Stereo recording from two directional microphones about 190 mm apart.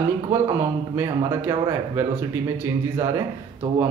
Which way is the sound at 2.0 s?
15° right (ahead or behind).